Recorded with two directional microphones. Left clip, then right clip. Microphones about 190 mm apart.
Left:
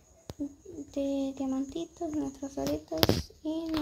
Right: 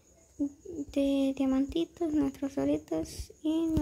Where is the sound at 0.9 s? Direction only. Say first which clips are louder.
Right 3 dB; 15° right (ahead or behind).